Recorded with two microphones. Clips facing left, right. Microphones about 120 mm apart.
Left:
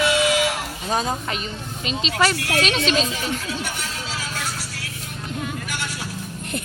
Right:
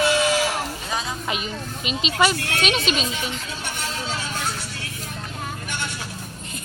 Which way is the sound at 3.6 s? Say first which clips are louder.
Right 1 dB; 30° right (ahead or behind).